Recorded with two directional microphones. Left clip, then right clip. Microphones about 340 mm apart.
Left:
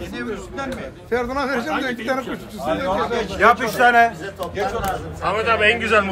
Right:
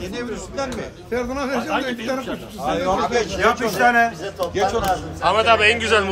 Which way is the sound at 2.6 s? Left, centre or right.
Centre.